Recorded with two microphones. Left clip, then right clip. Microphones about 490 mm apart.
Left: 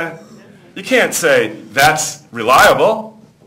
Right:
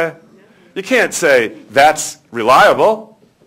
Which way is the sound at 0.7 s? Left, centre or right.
Right.